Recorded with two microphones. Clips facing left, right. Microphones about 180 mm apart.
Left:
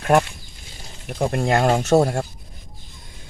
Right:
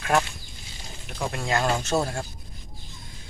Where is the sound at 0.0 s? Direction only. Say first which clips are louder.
Left 6 dB; 50° left (ahead or behind).